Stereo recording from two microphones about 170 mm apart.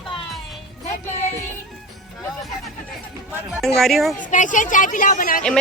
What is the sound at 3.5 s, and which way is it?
Speech, centre (ahead or behind).